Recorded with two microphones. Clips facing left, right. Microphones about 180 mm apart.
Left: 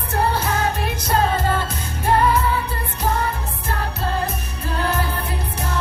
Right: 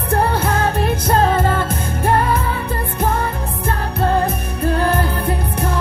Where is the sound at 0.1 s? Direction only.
55° right (ahead or behind).